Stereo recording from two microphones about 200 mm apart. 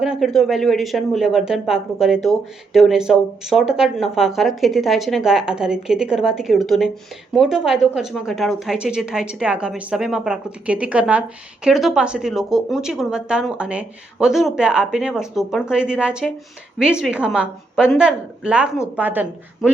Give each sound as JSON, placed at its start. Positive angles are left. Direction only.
{"t": 0.0, "sound": "a woman's voice", "side_deg": 0}